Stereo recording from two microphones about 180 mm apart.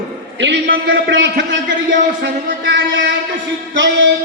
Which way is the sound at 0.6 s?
55° right (ahead or behind).